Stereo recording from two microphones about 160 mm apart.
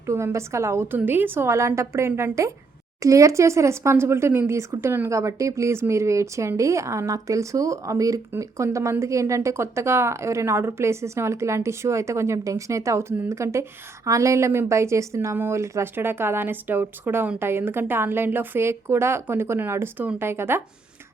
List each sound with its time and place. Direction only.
0.0 s speech: 15° right (ahead or behind)